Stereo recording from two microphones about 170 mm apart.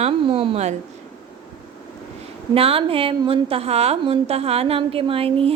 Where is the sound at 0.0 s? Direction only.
30° right (ahead or behind).